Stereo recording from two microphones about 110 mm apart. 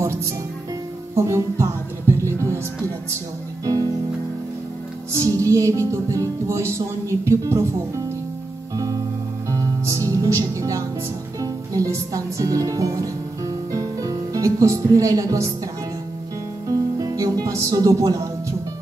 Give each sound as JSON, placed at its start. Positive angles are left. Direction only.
{"t": 1.1, "sound": "music", "side_deg": -25}
{"t": 3.6, "sound": "music", "side_deg": -35}
{"t": 5.1, "sound": "music", "side_deg": -30}
{"t": 8.7, "sound": "music", "side_deg": -30}
{"t": 11.3, "sound": "speech", "side_deg": -30}
{"t": 16.6, "sound": "music", "side_deg": -35}